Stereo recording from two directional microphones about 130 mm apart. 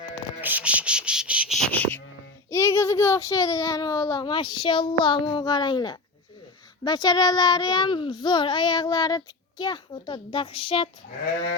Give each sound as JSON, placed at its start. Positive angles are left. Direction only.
{"t": 0.4, "sound": "insect", "side_deg": -10}
{"t": 1.5, "sound": "speech", "side_deg": 10}
{"t": 2.5, "sound": "a child's voice", "side_deg": 25}